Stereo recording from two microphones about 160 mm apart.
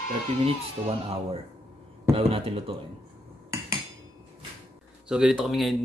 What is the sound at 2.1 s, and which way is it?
Speech, 35° right (ahead or behind).